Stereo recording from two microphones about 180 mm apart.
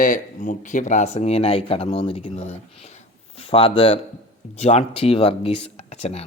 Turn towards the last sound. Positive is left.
turn(degrees=35)  # may be behind; listen again after turning